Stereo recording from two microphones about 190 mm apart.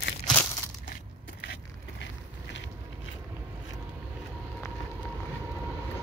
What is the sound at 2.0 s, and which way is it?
Vehicle, 75° left (ahead or behind).